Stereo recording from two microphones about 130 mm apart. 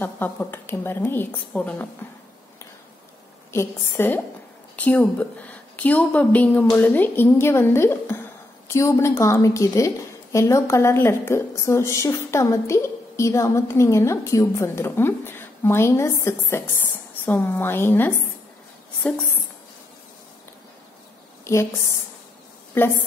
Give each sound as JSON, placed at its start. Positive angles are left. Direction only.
{"t": 0.0, "sound": "a woman's voice", "side_deg": 15}
{"t": 3.5, "sound": "a woman's voice", "side_deg": 20}
{"t": 21.5, "sound": "a woman's voice", "side_deg": 20}